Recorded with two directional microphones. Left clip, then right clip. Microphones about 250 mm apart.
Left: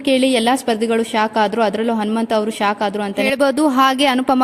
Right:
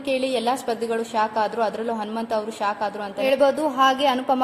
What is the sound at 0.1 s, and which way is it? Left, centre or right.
A woman's voice, left.